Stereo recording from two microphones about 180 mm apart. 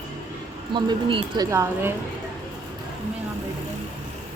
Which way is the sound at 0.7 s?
25° right (ahead or behind).